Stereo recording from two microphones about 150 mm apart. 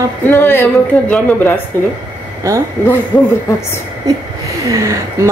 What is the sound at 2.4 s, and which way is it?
Speech, 20° right (ahead or behind).